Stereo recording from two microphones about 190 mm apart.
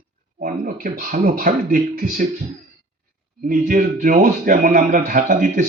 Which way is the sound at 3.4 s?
45° right (ahead or behind).